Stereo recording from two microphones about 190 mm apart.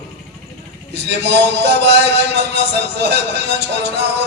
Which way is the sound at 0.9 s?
65° right (ahead or behind).